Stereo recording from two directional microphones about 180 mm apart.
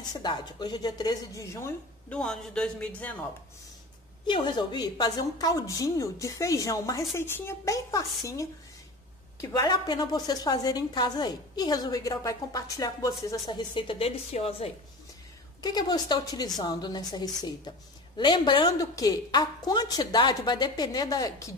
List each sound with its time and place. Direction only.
0.1 s a woman's voice: 25° left (ahead or behind); by 3.2 s 10° left (ahead or behind)
4.3 s a woman's voice: 25° left (ahead or behind)
15.6 s a woman's voice: 20° left (ahead or behind)